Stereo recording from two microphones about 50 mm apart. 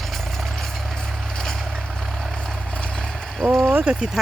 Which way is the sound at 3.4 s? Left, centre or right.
Centre.